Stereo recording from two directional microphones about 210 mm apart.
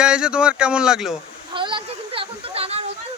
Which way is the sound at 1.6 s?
25° right (ahead or behind).